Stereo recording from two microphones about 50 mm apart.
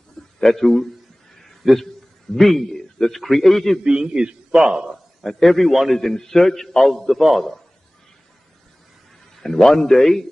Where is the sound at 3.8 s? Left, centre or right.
Centre.